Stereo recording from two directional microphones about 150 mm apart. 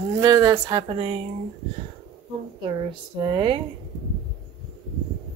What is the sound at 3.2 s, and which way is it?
Speech, 35° right (ahead or behind).